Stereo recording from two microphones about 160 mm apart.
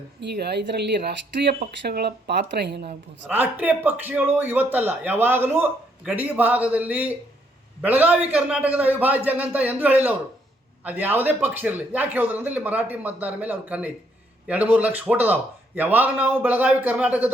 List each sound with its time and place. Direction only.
0.2 s speech: 90° right
3.2 s a man's voice: 10° right (ahead or behind)